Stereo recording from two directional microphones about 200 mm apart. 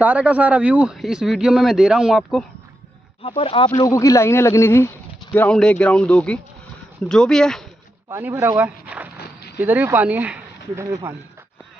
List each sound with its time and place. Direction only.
0.0 s speech: 5° right (ahead or behind)
3.2 s speech: 25° left (ahead or behind); by 7.6 s centre (ahead or behind)
8.1 s speech: 10° right (ahead or behind)
9.1 s a sound: 55° left (ahead or behind)
9.6 s speech: 10° right (ahead or behind)